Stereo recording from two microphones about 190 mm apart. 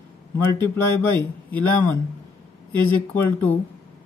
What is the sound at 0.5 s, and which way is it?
Speech, 10° left (ahead or behind).